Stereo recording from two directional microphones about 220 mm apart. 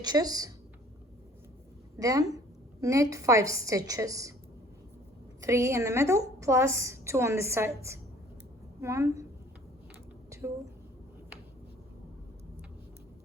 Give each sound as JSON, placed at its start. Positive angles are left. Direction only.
{"t": 0.0, "sound": "a woman's voice", "side_deg": -15}
{"t": 2.0, "sound": "a woman's voice", "side_deg": -15}
{"t": 5.4, "sound": "a woman's voice", "side_deg": -15}